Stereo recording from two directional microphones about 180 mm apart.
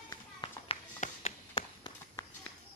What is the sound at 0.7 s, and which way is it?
Run, 35° left (ahead or behind).